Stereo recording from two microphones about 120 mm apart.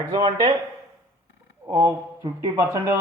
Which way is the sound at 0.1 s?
35° right (ahead or behind).